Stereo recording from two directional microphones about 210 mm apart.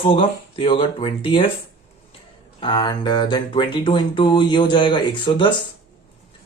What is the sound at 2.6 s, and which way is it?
Speech, 20° left (ahead or behind).